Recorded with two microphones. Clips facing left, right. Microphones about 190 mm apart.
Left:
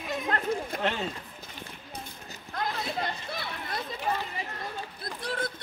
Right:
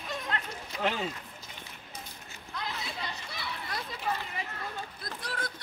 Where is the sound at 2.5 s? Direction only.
50° left (ahead or behind).